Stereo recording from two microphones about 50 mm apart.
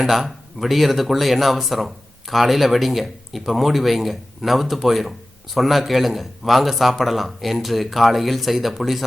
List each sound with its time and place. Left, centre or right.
0.0 s speech: centre